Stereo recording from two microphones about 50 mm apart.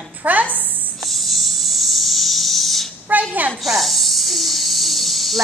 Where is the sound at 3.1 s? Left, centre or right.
Right.